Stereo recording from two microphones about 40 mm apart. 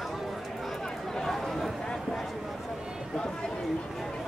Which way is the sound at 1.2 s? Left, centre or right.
Centre.